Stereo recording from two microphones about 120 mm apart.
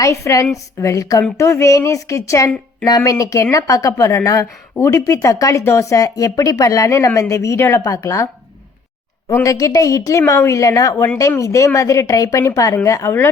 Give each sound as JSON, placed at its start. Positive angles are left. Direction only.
{"t": 0.0, "sound": "speech", "side_deg": 25}
{"t": 9.3, "sound": "speech", "side_deg": 25}